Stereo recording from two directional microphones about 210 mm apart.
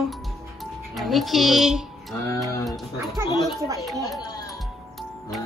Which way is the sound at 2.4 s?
15° left (ahead or behind).